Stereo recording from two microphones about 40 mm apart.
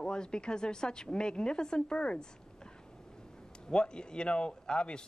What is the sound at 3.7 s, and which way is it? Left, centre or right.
A woman's voice, left.